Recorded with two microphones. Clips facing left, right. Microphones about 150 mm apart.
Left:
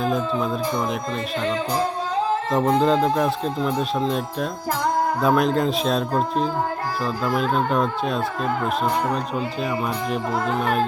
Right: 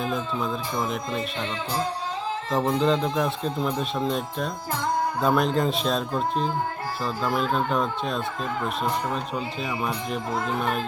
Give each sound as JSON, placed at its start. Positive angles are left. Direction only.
{"t": 2.8, "sound": "speech", "side_deg": 0}
{"t": 5.2, "sound": "speech", "side_deg": 0}
{"t": 6.8, "sound": "speech", "side_deg": 45}
{"t": 7.5, "sound": "speech", "side_deg": 0}
{"t": 10.6, "sound": "speech", "side_deg": 45}